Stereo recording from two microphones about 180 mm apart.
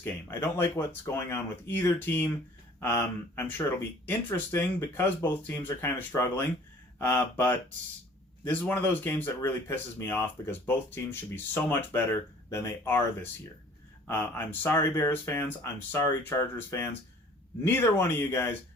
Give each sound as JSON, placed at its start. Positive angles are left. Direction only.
{"t": 0.0, "sound": "speech", "side_deg": 15}
{"t": 14.1, "sound": "speech", "side_deg": 10}